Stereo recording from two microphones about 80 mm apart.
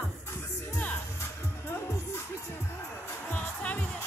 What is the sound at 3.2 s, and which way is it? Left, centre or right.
Music, centre.